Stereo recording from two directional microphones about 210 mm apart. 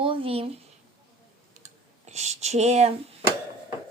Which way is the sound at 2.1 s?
30° right (ahead or behind).